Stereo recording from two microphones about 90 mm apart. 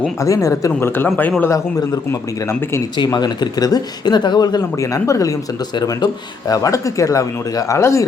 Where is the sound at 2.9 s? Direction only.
50° left (ahead or behind).